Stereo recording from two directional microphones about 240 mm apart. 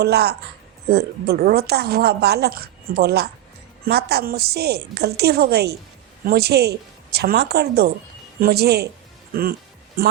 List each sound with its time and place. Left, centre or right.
0.0 s a woman's voice: right